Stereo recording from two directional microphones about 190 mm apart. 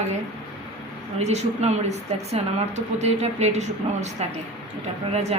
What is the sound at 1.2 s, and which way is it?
A woman's voice, 35° right (ahead or behind).